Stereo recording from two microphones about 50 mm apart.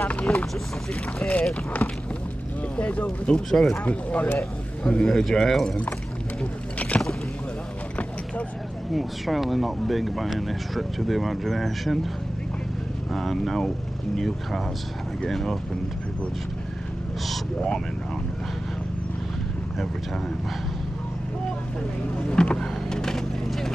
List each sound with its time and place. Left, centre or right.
0.3 s vehicle: centre
1.2 s speech: left
2.8 s speech: left
3.4 s speech: centre
3.7 s speech: left
4.8 s speech: centre
6.8 s boat: left
8.9 s speech: centre
13.1 s speech: centre
22.2 s vehicle: centre